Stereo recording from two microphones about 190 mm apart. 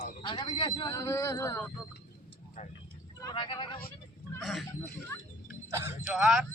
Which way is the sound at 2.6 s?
45° left (ahead or behind).